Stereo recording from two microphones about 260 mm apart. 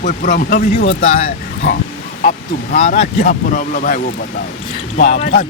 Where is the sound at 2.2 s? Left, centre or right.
Left.